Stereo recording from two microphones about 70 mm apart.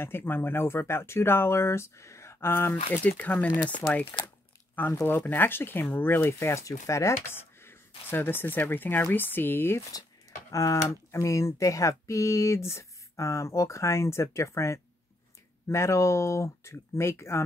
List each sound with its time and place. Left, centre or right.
0.0 s speech: left
4.1 s speech: left
10.5 s speech: left